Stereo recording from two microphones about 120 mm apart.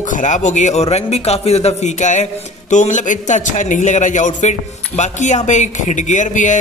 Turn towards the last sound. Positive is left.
turn(degrees=90)